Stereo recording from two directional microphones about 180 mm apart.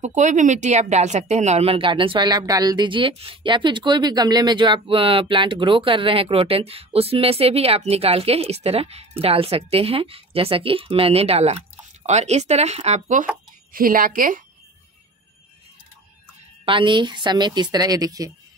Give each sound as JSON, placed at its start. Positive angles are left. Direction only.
{"t": 0.0, "sound": "speech", "side_deg": -40}
{"t": 13.7, "sound": "a woman's voice", "side_deg": -50}
{"t": 16.6, "sound": "speech", "side_deg": -25}